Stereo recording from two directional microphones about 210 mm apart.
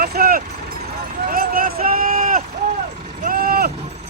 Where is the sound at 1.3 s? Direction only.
40° right (ahead or behind).